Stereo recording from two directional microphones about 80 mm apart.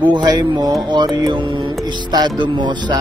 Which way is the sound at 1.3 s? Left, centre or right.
Right.